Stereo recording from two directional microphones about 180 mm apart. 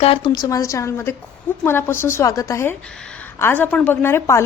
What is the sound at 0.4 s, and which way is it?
A woman's voice, 20° left (ahead or behind).